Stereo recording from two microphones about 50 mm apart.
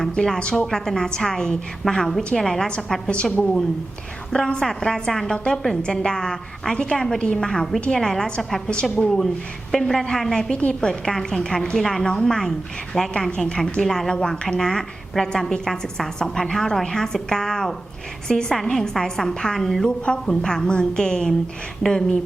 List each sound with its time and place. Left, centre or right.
0.0 s a woman's voice: centre
4.3 s a woman's voice: centre
8.6 s a woman's voice: centre